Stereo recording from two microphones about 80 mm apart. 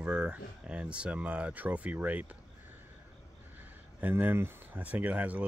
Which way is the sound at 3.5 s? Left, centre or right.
Right.